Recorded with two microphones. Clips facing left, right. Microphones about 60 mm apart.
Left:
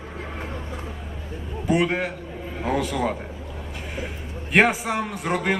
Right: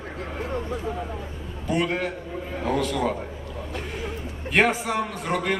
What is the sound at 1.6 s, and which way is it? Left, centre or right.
A man's voice, centre.